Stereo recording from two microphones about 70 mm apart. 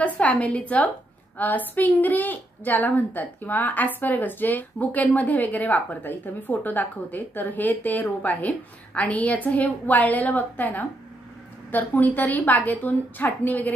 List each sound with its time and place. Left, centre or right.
0.0 s a woman's voice: centre